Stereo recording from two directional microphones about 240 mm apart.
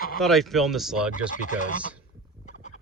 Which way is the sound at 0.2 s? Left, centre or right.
Centre.